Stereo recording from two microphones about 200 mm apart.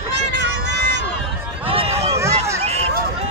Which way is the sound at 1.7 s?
30° right (ahead or behind).